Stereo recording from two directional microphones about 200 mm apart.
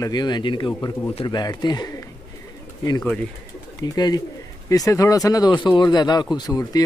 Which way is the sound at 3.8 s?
20° left (ahead or behind).